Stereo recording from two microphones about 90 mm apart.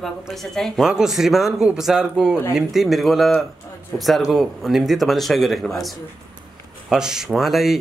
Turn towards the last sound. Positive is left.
turn(degrees=0)  # may be behind; listen again after turning